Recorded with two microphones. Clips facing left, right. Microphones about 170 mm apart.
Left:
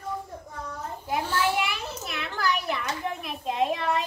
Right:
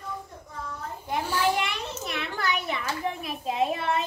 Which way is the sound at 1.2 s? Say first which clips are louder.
Right 2 dB; 10° right (ahead or behind).